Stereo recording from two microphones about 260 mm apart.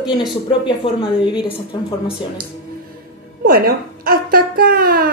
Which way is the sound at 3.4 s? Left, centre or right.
Right.